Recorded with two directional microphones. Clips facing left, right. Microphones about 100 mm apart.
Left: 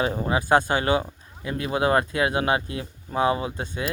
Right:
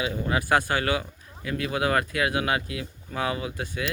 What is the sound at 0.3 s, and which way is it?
Speech, 25° left (ahead or behind).